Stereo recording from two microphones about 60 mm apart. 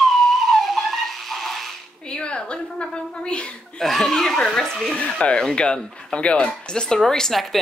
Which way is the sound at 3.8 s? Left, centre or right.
Centre.